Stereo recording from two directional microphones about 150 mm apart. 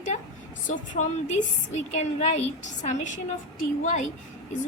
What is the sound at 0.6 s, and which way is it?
A woman's voice, 60° left (ahead or behind).